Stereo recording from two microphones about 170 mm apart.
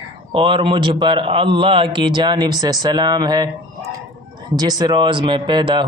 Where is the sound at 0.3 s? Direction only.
30° right (ahead or behind).